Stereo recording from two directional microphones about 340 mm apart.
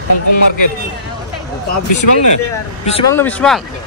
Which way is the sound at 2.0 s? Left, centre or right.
Left.